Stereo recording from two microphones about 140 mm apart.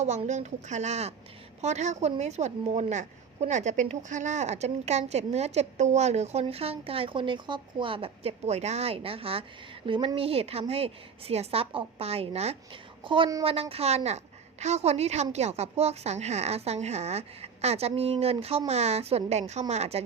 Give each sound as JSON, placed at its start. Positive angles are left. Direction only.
{"t": 0.0, "sound": "a woman's voice", "side_deg": -55}
{"t": 13.1, "sound": "a woman's voice", "side_deg": -35}